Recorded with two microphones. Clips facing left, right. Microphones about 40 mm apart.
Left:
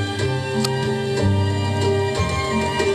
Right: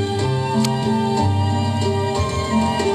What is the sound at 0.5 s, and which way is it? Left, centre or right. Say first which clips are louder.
Music: right 4 dB; centre.